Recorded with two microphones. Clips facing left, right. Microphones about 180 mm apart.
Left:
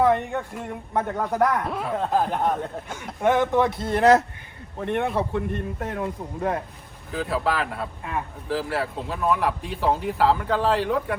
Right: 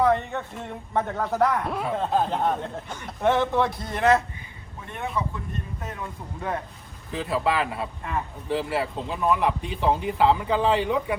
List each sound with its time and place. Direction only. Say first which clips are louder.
0.1 s speech: left 1 dB; 15° left (ahead or behind)
3.8 s speech: left 5 dB; 30° left (ahead or behind)
4.8 s a man's voice: left 6 dB; 65° left (ahead or behind)
7.1 s speech: even; centre (ahead or behind)